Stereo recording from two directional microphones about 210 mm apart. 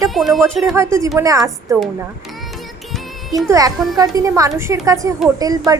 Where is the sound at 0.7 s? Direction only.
15° right (ahead or behind).